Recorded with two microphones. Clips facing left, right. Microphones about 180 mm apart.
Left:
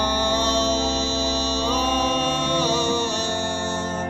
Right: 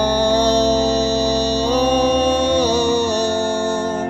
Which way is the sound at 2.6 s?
65° right (ahead or behind).